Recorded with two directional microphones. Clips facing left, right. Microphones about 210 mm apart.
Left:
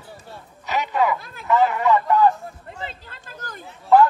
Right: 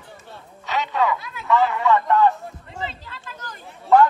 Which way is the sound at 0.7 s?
15° left (ahead or behind).